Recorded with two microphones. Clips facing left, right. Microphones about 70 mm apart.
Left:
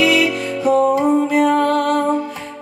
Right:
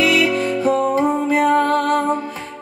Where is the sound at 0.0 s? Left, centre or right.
Right.